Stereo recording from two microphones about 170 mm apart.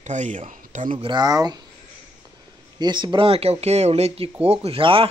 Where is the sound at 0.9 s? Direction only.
25° right (ahead or behind).